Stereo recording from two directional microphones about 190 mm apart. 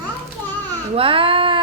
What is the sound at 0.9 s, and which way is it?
Speech, 30° right (ahead or behind).